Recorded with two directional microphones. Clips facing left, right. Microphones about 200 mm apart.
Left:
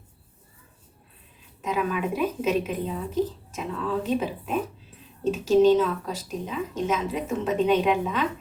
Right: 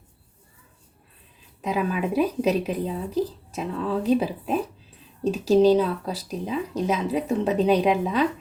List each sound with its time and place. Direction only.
1.6 s speech: 35° right (ahead or behind)